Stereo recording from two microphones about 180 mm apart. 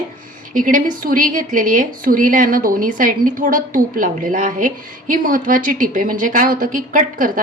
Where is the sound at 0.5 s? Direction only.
50° right (ahead or behind).